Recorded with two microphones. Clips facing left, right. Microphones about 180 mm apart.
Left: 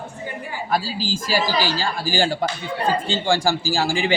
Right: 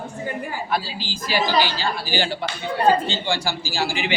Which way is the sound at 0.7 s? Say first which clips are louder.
Left 6 dB; 40° left (ahead or behind).